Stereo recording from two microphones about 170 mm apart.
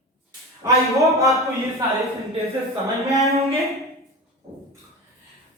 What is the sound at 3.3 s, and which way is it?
Speech, 20° right (ahead or behind).